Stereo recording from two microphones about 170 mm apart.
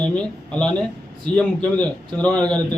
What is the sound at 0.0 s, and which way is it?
A man's voice, 5° left (ahead or behind).